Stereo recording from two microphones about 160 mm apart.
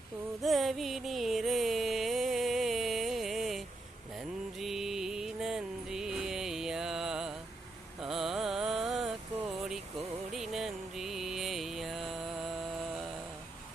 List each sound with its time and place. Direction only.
0.4 s music: centre (ahead or behind)
8.0 s carnatic music: centre (ahead or behind)
10.3 s music: centre (ahead or behind)